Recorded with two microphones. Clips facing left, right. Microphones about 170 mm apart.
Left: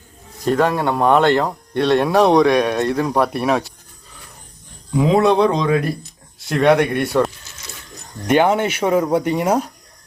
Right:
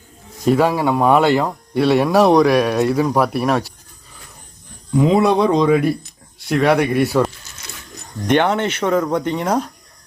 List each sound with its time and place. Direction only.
0.4 s speech: 5° right (ahead or behind)
4.9 s speech: 5° right (ahead or behind)
8.3 s speech: 10° left (ahead or behind)